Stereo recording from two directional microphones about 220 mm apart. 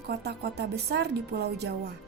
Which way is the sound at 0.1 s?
50° right (ahead or behind).